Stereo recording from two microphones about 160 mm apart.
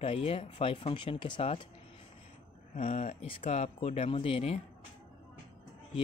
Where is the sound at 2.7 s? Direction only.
45° left (ahead or behind).